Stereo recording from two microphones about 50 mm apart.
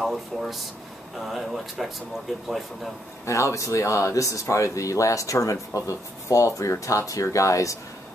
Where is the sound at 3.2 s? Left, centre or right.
Left.